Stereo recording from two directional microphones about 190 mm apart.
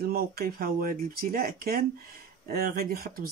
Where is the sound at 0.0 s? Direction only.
55° right (ahead or behind).